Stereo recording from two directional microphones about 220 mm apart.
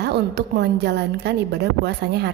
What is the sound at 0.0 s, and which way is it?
A woman's voice, 50° right (ahead or behind).